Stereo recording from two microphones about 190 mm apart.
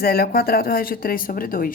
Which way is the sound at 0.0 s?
55° left (ahead or behind).